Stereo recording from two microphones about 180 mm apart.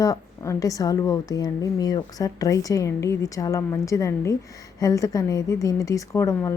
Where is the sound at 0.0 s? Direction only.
20° left (ahead or behind).